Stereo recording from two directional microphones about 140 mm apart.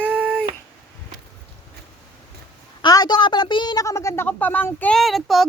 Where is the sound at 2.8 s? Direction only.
30° left (ahead or behind); by 4.9 s 10° left (ahead or behind).